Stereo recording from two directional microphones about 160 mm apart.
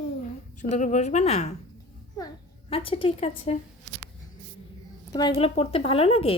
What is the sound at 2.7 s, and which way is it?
Speech, 35° left (ahead or behind).